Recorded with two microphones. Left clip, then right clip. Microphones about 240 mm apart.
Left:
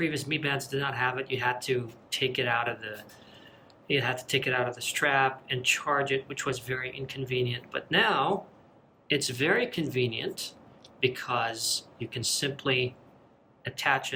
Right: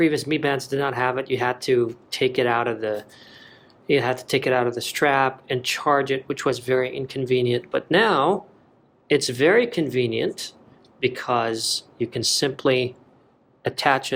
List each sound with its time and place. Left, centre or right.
0.0 s speech: centre